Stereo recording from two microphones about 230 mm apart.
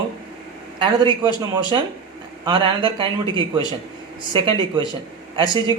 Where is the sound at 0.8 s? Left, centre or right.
Right.